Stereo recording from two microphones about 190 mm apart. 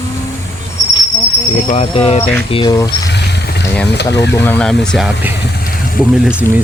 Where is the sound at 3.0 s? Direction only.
65° left (ahead or behind).